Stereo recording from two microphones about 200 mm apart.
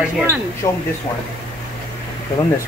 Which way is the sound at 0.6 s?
15° left (ahead or behind).